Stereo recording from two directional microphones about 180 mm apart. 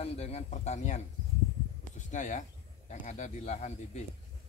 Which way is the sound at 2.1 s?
45° left (ahead or behind).